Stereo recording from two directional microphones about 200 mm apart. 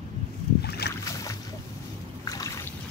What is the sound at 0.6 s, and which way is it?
Boat, 55° left (ahead or behind).